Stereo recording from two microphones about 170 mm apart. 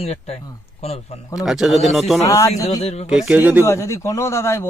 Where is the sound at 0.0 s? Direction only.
40° left (ahead or behind).